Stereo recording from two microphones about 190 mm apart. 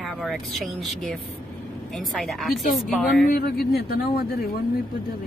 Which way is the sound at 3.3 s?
50° left (ahead or behind).